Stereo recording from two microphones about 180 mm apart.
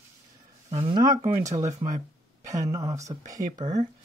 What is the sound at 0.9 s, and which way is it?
Speech, 20° right (ahead or behind).